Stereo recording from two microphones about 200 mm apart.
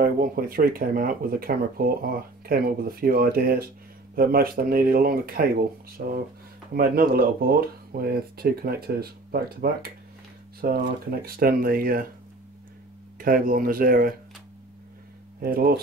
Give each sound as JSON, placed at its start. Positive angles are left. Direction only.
{"t": 0.0, "sound": "speech", "side_deg": -45}
{"t": 13.2, "sound": "speech", "side_deg": -45}
{"t": 15.4, "sound": "speech", "side_deg": -50}